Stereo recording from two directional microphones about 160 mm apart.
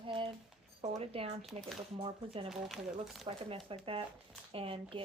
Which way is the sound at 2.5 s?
Centre (ahead or behind).